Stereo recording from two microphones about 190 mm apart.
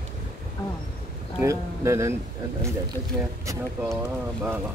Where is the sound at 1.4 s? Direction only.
15° right (ahead or behind).